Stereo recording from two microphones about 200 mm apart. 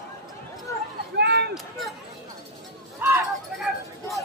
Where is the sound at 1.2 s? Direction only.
55° right (ahead or behind).